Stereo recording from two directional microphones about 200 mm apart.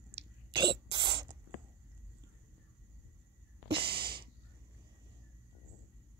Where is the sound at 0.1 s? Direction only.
20° right (ahead or behind).